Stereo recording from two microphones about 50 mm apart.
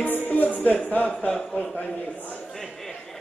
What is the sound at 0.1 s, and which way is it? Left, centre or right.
Music, left.